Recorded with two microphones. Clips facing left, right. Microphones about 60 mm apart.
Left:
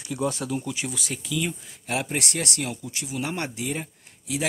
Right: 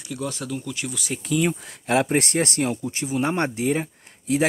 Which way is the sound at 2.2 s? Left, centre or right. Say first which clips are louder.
Right 7 dB; right.